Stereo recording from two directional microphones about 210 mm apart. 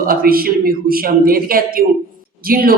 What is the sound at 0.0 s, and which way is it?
Speech, 45° right (ahead or behind).